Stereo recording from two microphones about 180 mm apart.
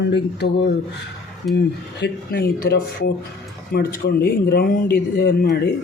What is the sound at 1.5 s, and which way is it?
Speech, 70° left (ahead or behind).